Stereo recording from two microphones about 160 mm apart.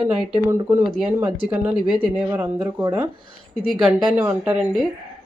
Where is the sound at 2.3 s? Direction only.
15° right (ahead or behind).